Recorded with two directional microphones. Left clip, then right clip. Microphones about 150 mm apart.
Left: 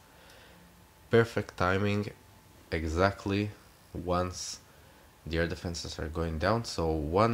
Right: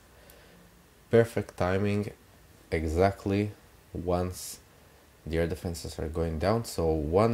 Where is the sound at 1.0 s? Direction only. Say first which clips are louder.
Right 2 dB; 5° right (ahead or behind).